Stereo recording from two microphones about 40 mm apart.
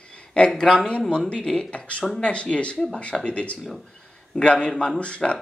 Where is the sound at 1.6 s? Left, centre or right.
Left.